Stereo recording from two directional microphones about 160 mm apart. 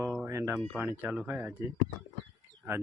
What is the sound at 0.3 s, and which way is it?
Speech, 15° right (ahead or behind).